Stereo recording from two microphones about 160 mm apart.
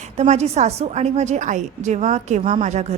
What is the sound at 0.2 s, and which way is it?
A woman's voice, 45° right (ahead or behind).